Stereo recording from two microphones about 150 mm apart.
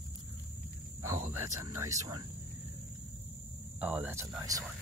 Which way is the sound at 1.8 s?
20° right (ahead or behind).